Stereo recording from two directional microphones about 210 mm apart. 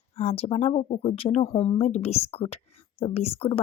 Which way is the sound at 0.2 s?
30° left (ahead or behind).